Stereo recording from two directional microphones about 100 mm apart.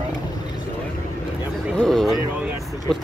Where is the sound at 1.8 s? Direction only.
5° left (ahead or behind).